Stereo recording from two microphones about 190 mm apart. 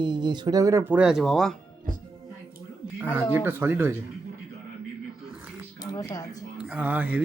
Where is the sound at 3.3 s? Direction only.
10° right (ahead or behind).